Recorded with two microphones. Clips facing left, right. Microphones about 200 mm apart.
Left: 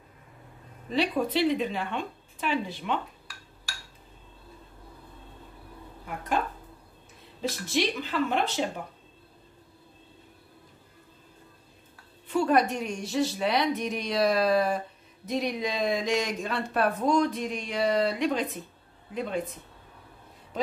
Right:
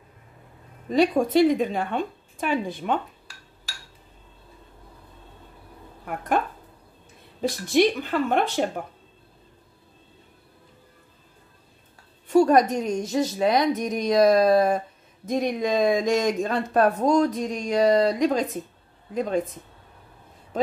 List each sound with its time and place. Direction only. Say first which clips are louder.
0.8 s a woman's voice: right 6 dB; 45° right (ahead or behind)
6.0 s a sound: right 5 dB; 55° right (ahead or behind)
7.7 s a woman's voice: right 8 dB; 50° right (ahead or behind)
12.3 s a woman's voice: right 6 dB; 40° right (ahead or behind)
20.5 s speech: right 5 dB; 50° right (ahead or behind)